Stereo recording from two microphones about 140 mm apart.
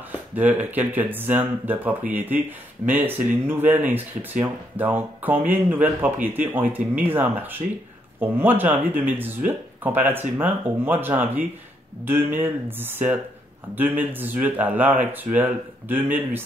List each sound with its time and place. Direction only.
0.1 s speech: 10° right (ahead or behind)